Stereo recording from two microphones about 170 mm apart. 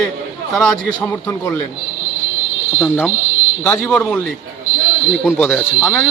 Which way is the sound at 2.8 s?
10° left (ahead or behind).